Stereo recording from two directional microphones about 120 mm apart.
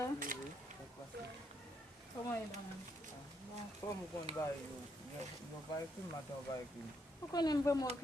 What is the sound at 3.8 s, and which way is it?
Speech, 25° left (ahead or behind).